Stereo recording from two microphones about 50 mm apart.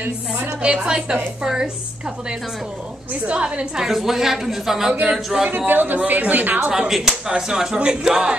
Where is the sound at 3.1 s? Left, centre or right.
Right.